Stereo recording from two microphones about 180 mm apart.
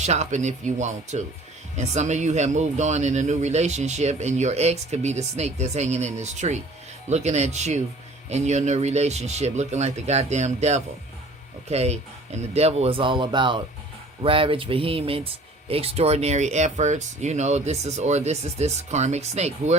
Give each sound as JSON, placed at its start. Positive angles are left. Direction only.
{"t": 0.0, "sound": "speech", "side_deg": -40}